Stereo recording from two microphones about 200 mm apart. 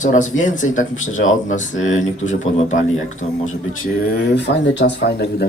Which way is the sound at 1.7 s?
80° left.